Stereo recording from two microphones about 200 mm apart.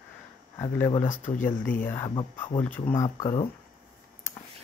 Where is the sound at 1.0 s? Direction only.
40° left (ahead or behind).